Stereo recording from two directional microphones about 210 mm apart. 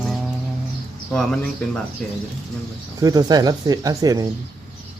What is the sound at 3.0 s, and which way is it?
Speech, 15° right (ahead or behind).